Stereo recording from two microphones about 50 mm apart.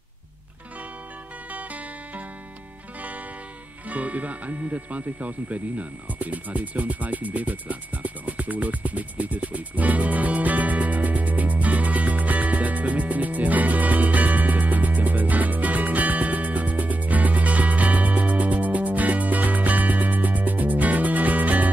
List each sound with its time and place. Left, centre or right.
1.5 s music: right
3.9 s music: right